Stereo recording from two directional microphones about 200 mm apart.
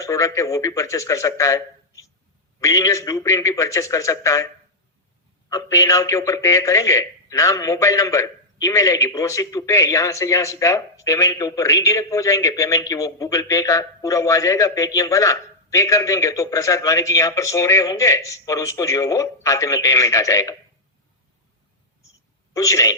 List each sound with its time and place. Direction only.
0.0 s a man's voice: 15° left (ahead or behind)
5.5 s a man's voice: 15° left (ahead or behind)
22.5 s a man's voice: 15° left (ahead or behind)